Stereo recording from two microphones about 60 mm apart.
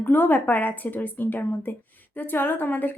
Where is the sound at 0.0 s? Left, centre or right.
Left.